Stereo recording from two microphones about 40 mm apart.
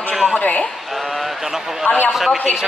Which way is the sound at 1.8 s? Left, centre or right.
Left.